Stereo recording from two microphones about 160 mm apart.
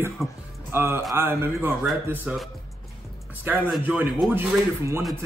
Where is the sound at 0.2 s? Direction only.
Centre (ahead or behind).